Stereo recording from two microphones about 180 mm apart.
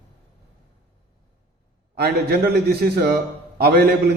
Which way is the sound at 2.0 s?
60° right (ahead or behind).